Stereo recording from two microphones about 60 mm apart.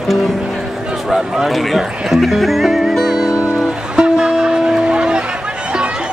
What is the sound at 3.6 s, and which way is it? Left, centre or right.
Music, centre.